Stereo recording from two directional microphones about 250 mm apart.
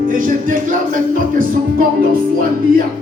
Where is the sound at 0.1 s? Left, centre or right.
Right.